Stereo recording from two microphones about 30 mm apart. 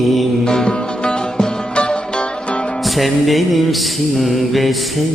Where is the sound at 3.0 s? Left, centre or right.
Centre.